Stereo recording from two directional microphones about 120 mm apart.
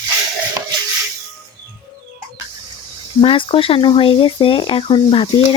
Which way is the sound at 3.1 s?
45° left (ahead or behind).